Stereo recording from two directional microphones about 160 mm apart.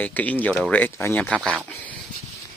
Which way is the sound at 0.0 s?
10° left (ahead or behind).